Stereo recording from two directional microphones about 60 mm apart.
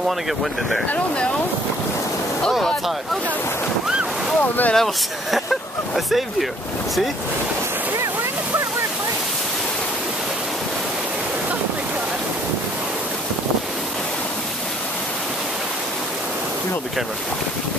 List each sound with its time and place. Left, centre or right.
0.4 s speech: centre
0.8 s speech: left
4.4 s speech: left
4.7 s speech: centre